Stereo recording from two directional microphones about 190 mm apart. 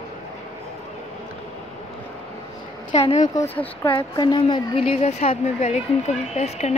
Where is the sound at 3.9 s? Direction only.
25° left (ahead or behind).